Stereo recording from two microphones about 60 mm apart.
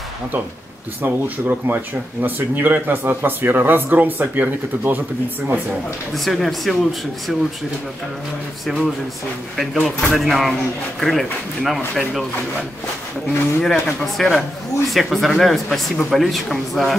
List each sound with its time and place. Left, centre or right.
1.0 s speech: right
6.1 s speech: centre
8.6 s speech: centre
13.6 s speech: centre